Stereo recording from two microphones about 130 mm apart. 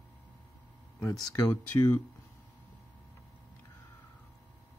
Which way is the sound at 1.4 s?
20° left (ahead or behind).